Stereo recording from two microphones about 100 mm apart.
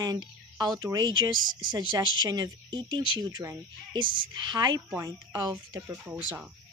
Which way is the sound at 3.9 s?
55° right (ahead or behind).